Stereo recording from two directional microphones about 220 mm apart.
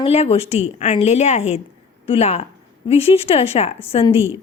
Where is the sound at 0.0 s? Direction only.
25° left (ahead or behind).